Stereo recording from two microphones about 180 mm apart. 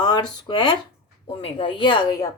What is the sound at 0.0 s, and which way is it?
Speech, 25° left (ahead or behind).